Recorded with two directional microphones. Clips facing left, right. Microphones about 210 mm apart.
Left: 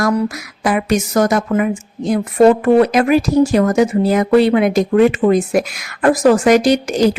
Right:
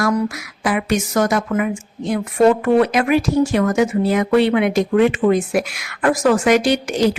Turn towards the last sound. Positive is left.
turn(degrees=40)  # may be behind; listen again after turning